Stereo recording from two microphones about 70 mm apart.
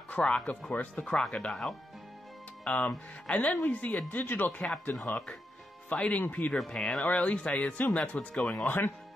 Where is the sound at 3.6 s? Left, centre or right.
Left.